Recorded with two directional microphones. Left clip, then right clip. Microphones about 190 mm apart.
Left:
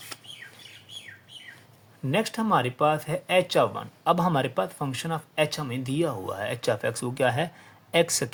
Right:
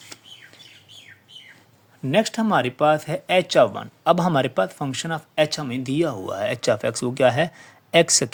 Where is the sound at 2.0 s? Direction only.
40° right (ahead or behind).